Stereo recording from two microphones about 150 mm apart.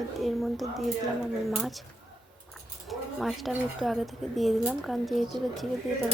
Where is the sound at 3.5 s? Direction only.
Centre (ahead or behind).